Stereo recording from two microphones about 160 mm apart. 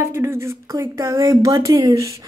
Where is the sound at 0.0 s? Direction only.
15° right (ahead or behind).